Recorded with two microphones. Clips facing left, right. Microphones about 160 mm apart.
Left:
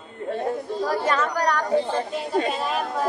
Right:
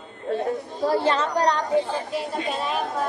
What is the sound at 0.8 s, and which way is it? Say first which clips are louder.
Speech: right 3 dB; 30° right (ahead or behind).